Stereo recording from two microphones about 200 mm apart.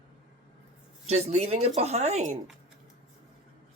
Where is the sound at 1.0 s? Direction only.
35° right (ahead or behind).